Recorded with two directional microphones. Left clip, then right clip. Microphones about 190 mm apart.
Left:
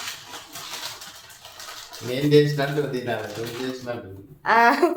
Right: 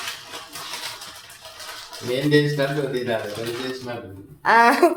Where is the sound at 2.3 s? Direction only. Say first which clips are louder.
Left 2 dB; 55° left (ahead or behind).